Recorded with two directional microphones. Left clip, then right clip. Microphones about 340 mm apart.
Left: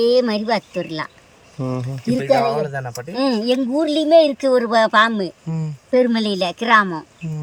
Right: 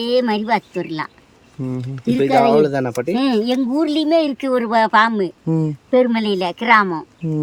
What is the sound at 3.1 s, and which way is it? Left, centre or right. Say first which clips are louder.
Speech: left 1 dB; centre.